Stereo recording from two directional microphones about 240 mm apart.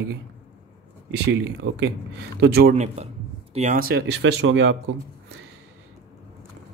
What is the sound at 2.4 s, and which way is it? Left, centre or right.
Speech, right.